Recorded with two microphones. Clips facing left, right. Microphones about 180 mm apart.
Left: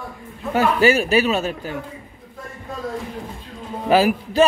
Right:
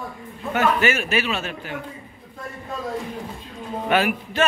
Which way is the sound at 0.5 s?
35° left (ahead or behind).